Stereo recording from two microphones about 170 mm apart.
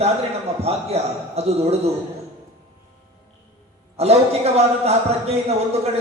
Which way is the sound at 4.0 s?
35° right (ahead or behind).